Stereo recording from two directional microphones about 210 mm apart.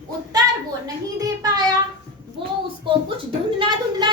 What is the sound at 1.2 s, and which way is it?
Child singing, 15° right (ahead or behind).